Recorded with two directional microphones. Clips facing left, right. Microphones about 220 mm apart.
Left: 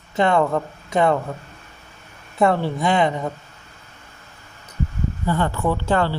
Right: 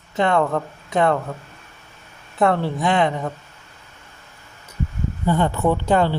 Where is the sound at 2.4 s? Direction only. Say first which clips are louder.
Even; centre (ahead or behind).